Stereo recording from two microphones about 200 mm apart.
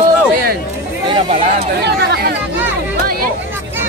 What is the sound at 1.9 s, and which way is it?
Speech, 55° right (ahead or behind).